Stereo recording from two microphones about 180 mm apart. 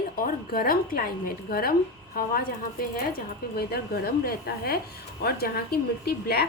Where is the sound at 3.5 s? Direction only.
60° left (ahead or behind).